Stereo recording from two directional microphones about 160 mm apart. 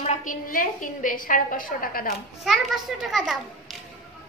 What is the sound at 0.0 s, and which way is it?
A woman's voice, 50° left (ahead or behind).